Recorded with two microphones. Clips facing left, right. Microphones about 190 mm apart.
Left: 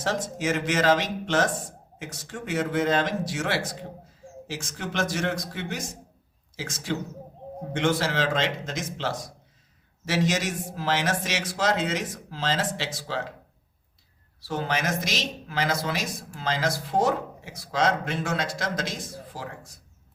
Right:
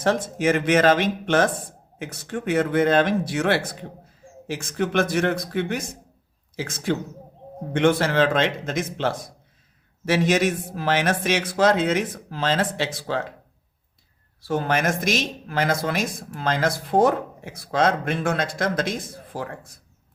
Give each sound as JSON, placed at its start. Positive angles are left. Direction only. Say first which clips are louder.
{"t": 0.0, "sound": "a man's voice", "louder": "right 6 dB", "side_deg": -55}
{"t": 14.4, "sound": "speech", "louder": "right 5 dB", "side_deg": -50}